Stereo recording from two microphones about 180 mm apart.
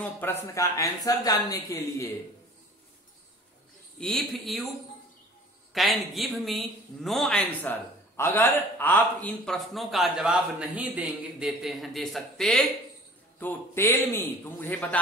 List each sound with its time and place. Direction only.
0.0 s speech: 10° left (ahead or behind)
4.0 s speech: centre (ahead or behind)
5.7 s speech: centre (ahead or behind)